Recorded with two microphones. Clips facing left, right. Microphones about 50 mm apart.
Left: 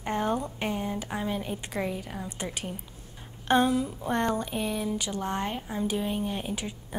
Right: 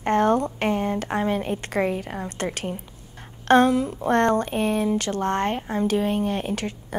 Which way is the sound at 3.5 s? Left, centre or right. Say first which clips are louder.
Right 6 dB; right.